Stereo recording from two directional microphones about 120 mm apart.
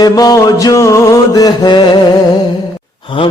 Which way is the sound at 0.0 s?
30° left (ahead or behind).